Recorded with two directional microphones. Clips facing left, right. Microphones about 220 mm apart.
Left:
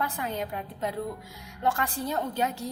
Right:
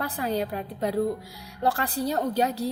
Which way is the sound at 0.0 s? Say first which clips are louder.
Right 4 dB; 35° right (ahead or behind).